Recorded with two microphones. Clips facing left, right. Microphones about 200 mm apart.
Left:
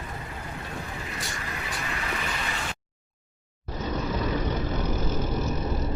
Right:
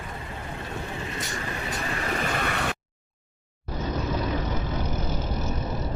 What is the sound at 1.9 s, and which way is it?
Vehicle, 40° right (ahead or behind).